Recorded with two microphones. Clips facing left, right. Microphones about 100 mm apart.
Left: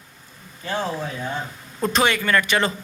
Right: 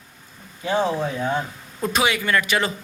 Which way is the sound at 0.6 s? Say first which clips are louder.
Right 5 dB; 15° right (ahead or behind).